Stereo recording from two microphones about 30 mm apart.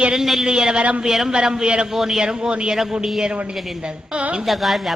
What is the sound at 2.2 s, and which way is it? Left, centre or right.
Speech, right.